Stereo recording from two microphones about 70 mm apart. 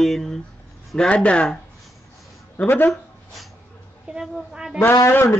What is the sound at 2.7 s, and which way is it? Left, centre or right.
Speech, left.